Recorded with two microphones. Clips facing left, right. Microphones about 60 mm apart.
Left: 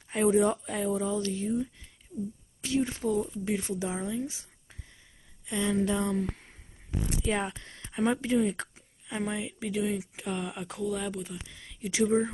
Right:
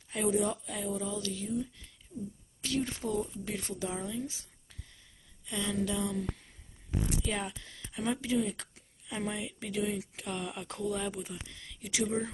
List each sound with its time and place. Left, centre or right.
0.1 s speech: left
2.6 s a woman's voice: centre; by 8.6 s left
8.7 s a sound: left
9.3 s speech: centre
10.8 s speech: centre
11.5 s a sound: centre
11.9 s a woman's voice: left